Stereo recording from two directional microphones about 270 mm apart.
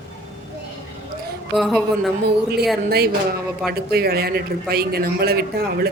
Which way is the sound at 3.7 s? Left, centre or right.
Right.